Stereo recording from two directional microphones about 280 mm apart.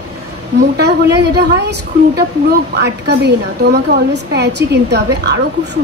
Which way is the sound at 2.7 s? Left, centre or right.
Right.